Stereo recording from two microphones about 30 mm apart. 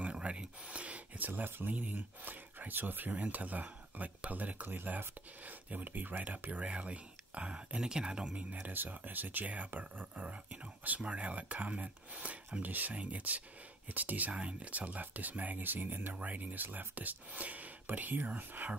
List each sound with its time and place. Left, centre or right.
0.0 s a sound: right
1.1 s speech: right
7.8 s speech: right
8.4 s speech: right
8.6 s speech: right
10.2 s speech: right
12.6 s speech: right
12.9 s speech: right
13.8 s speech: right
14.3 s speech: right
17.3 s speech: right